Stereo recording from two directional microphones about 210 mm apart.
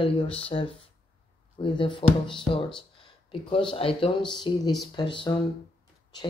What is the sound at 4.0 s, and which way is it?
Speech, 20° left (ahead or behind).